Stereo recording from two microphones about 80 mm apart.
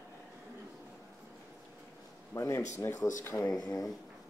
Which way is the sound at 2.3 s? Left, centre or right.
Left.